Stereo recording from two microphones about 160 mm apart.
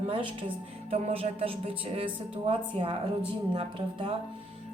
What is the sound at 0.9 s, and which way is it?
Music, 40° right (ahead or behind).